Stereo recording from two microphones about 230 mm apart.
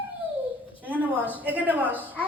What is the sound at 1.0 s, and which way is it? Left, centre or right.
Speech, centre.